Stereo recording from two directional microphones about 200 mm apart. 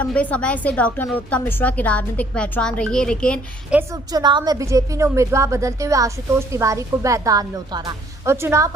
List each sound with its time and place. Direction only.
0.0 s a woman's voice: 5° left (ahead or behind)
3.7 s a woman's voice: 15° right (ahead or behind)